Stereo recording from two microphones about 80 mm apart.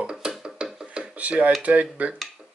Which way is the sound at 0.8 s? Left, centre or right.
Centre.